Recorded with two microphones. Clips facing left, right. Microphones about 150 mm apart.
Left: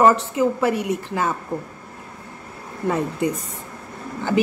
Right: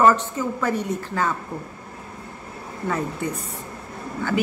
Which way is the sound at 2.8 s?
15° left (ahead or behind).